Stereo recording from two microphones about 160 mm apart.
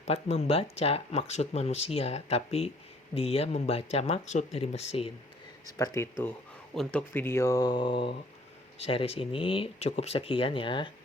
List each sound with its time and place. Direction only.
0.0 s speech: 40° left (ahead or behind)
5.6 s speech: 20° left (ahead or behind)